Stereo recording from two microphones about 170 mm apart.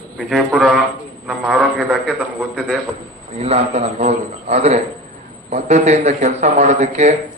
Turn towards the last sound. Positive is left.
turn(degrees=-40)  # may be behind; listen again after turning